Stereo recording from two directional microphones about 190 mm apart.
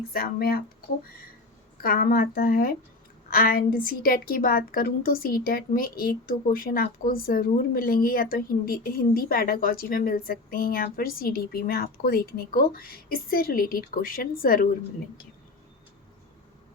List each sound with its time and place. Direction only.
0.1 s a woman's voice: 50° left (ahead or behind)
1.8 s a woman's voice: 50° left (ahead or behind)